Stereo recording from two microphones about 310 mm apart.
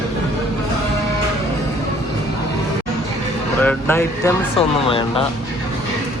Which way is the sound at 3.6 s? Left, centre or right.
Centre.